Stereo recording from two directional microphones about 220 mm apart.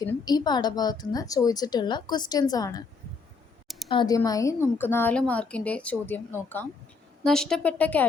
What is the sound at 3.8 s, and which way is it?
A woman's voice, 20° left (ahead or behind).